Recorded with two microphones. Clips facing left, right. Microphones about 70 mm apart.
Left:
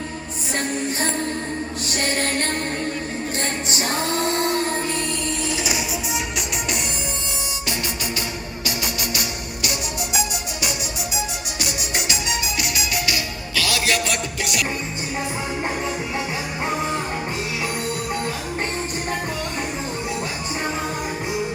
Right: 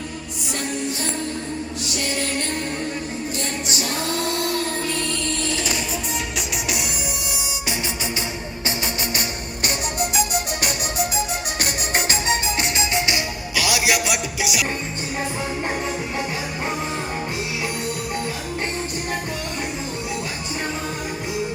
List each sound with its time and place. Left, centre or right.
0.8 s music: left
3.7 s music: left
5.5 s music: centre
9.6 s music: right; by 14.6 s centre